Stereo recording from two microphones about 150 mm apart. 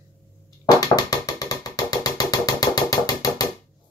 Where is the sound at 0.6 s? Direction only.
25° left (ahead or behind).